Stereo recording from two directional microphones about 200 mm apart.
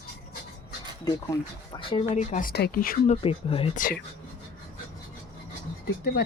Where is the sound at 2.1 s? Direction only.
40° left (ahead or behind).